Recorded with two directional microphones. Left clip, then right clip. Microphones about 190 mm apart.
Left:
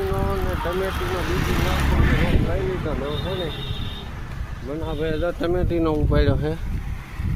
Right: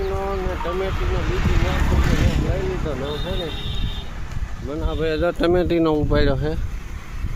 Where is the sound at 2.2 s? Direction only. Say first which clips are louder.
Left 1 dB; 40° right (ahead or behind).